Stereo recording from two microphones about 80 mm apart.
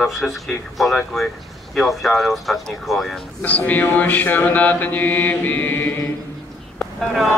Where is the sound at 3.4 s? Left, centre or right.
Centre.